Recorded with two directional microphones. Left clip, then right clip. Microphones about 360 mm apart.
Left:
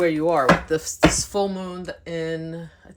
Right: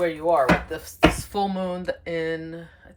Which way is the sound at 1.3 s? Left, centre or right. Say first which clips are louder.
Left 1 dB; centre.